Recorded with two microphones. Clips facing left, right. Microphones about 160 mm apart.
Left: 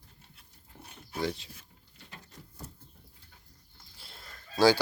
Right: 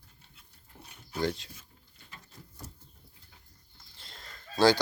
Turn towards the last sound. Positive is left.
turn(degrees=10)  # may be behind; listen again after turning